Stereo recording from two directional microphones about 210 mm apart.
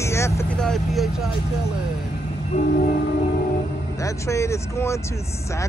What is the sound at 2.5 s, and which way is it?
Train, 40° left (ahead or behind).